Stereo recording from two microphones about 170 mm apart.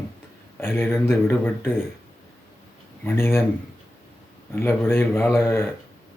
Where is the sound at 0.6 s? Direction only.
15° left (ahead or behind).